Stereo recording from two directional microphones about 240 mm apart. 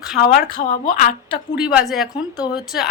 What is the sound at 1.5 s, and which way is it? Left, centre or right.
Speech, centre.